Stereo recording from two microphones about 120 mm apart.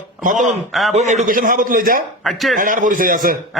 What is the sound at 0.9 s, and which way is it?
Speech, 70° right (ahead or behind).